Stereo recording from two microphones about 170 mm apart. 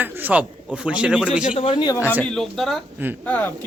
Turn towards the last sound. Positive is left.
turn(degrees=10)  # may be behind; listen again after turning